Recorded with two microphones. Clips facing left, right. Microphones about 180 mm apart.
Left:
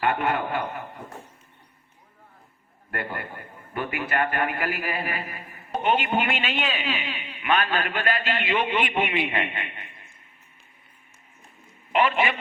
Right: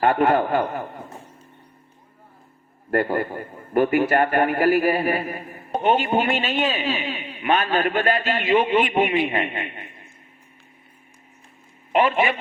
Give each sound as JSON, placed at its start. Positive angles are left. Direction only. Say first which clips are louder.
{"t": 0.0, "sound": "a man's voice", "louder": "right 7 dB", "side_deg": -40}
{"t": 2.9, "sound": "a man's voice", "louder": "right 11 dB", "side_deg": -40}
{"t": 11.9, "sound": "a man's voice", "louder": "right 3 dB", "side_deg": -40}